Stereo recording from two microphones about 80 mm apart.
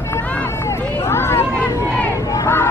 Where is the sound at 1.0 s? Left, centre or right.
Left.